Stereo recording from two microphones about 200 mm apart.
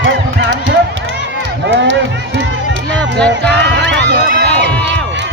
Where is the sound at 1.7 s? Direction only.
65° right (ahead or behind).